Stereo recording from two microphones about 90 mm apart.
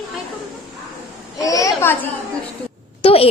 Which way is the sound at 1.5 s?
40° left (ahead or behind).